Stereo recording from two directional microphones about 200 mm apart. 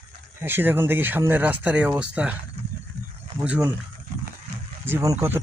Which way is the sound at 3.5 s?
5° right (ahead or behind).